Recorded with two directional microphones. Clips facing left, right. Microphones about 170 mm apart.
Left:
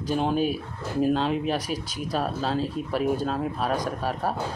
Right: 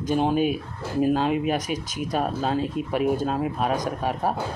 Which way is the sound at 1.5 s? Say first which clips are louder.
Right 2 dB; 45° right (ahead or behind).